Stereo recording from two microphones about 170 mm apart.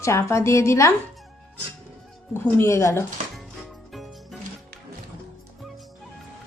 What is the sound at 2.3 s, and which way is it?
Speech, 15° left (ahead or behind).